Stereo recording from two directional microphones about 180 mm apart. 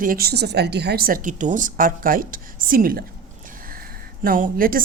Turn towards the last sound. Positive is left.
turn(degrees=-50)  # may be behind; listen again after turning